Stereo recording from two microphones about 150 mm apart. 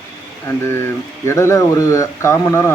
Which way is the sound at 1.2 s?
20° left (ahead or behind).